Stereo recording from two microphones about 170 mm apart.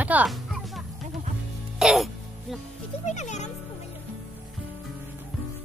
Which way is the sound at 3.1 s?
45° left (ahead or behind).